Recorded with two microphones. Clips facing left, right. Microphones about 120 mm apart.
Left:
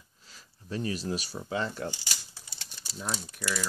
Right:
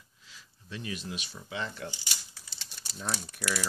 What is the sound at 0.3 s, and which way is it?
Speech, 40° left (ahead or behind).